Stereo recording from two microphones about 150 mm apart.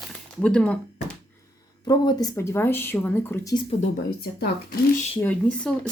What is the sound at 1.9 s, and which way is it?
Speech, 25° left (ahead or behind).